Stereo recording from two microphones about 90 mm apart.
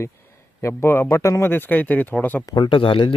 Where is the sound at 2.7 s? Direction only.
70° left (ahead or behind).